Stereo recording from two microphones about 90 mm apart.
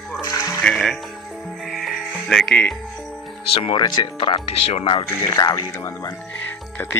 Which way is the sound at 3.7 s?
50° left (ahead or behind).